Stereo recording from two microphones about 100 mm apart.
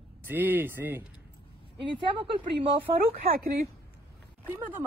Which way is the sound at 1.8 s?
60° right (ahead or behind).